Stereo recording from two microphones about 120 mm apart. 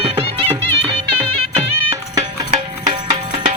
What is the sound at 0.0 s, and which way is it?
Music, 55° right (ahead or behind).